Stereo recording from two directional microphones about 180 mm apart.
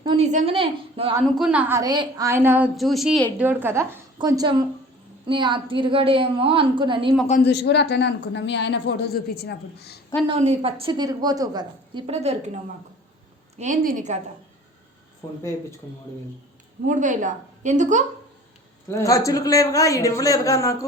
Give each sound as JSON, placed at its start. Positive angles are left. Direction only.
{"t": 0.2, "sound": "a woman's voice", "side_deg": -40}
{"t": 1.2, "sound": "a woman's voice", "side_deg": -5}
{"t": 2.7, "sound": "a woman's voice", "side_deg": 0}
{"t": 7.4, "sound": "a woman's voice", "side_deg": 70}
{"t": 10.2, "sound": "a woman's voice", "side_deg": -35}
{"t": 13.6, "sound": "a woman's voice", "side_deg": -45}
{"t": 16.8, "sound": "a woman's voice", "side_deg": -45}
{"t": 18.9, "sound": "a man's voice", "side_deg": 15}